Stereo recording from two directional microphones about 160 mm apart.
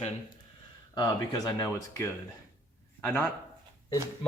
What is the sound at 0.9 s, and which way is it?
Speech, 25° left (ahead or behind).